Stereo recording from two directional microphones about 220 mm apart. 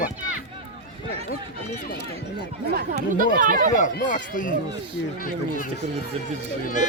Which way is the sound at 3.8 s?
35° left (ahead or behind).